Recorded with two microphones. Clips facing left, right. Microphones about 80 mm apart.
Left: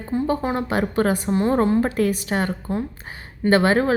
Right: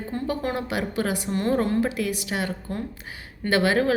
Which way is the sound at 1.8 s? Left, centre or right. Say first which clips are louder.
Left 5 dB; left.